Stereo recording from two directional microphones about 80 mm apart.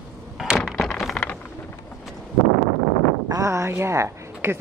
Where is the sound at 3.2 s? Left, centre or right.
Right.